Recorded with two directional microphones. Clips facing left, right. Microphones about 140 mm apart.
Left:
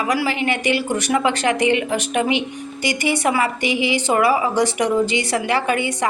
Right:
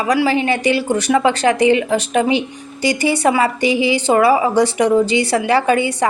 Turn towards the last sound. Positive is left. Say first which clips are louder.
# right 5 dB
turn(degrees=-30)  # may be behind; listen again after turning